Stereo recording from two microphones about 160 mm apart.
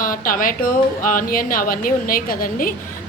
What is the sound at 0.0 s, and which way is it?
A woman's voice, 60° left (ahead or behind).